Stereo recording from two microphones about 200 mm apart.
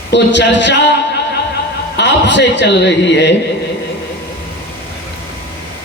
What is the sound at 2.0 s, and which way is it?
A man's voice, 60° left (ahead or behind).